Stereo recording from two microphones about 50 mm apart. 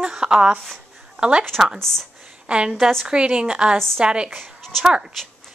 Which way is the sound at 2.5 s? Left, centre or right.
Right.